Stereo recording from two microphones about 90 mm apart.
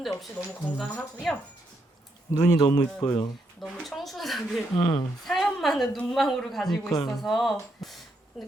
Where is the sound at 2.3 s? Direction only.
35° left (ahead or behind).